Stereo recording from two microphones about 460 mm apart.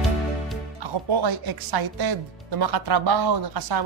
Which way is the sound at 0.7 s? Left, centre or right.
Right.